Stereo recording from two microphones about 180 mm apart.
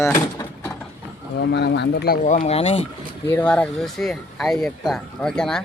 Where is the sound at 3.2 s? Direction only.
10° left (ahead or behind).